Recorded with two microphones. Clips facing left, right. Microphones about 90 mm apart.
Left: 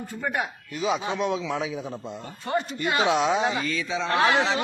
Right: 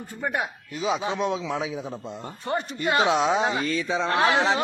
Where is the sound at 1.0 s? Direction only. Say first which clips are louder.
Even; 25° right (ahead or behind).